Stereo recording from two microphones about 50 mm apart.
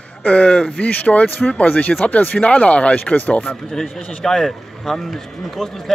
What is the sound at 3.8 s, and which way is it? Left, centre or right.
A man's voice, centre.